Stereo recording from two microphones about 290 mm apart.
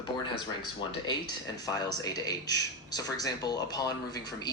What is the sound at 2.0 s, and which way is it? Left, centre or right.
A man's voice, centre.